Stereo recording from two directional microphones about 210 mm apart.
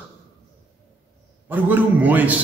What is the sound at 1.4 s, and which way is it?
Speech, 10° right (ahead or behind).